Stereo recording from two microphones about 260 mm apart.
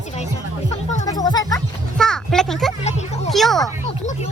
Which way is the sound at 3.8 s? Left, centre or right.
Left.